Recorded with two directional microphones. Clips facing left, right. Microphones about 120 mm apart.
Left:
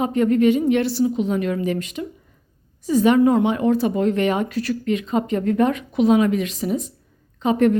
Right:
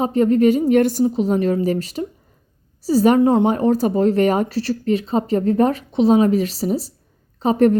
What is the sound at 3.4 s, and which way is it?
Speech, 40° right (ahead or behind).